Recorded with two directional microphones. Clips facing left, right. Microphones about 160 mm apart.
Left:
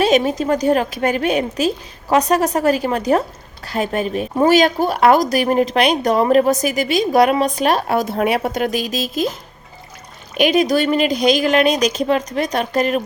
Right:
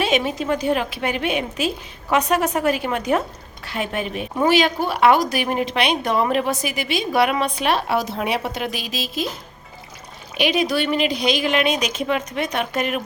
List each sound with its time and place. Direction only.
0.0 s a woman's voice: 40° left (ahead or behind)
10.3 s a woman's voice: 45° left (ahead or behind)